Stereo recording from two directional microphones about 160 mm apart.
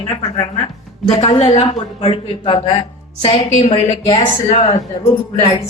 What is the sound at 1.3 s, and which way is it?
A man's voice, 35° left (ahead or behind).